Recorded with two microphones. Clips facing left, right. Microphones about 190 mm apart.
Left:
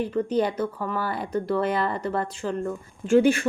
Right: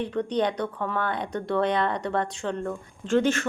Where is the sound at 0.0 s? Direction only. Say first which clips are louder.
Left 2 dB; 5° left (ahead or behind).